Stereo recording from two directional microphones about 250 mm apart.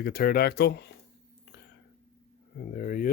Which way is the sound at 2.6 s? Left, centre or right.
Left.